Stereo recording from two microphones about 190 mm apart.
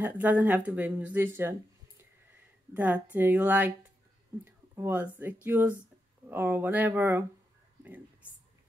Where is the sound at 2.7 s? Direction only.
10° right (ahead or behind).